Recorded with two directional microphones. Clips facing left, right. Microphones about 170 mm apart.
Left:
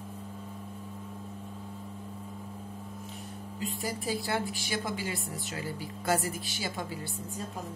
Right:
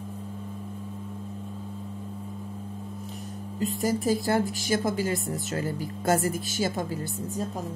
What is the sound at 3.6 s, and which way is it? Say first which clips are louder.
A woman's voice: right 9 dB; 45° right (ahead or behind).